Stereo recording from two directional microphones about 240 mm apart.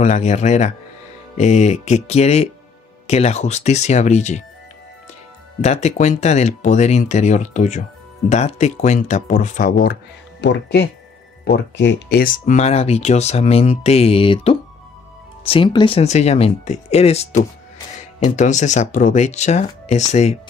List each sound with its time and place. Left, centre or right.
0.0 s speech: left
5.6 s speech: left